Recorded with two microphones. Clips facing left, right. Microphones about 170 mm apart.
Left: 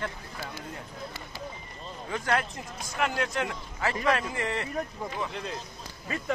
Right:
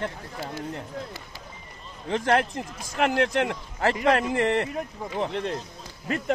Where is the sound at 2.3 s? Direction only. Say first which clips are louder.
Right 6 dB; 60° right (ahead or behind).